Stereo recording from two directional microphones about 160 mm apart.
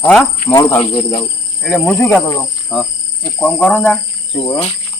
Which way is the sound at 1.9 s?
15° left (ahead or behind).